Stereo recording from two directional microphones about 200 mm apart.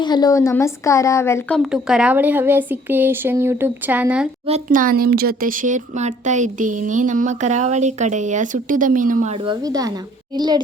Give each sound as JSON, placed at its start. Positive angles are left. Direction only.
{"t": 0.0, "sound": "a woman's voice", "side_deg": 20}
{"t": 4.4, "sound": "speech", "side_deg": -35}